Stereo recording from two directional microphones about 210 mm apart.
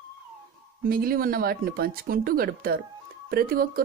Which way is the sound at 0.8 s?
45° right (ahead or behind).